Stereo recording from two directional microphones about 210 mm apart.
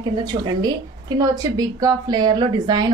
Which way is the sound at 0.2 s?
20° right (ahead or behind).